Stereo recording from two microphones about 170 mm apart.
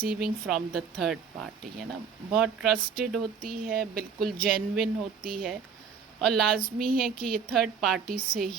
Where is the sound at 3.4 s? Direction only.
60° right (ahead or behind).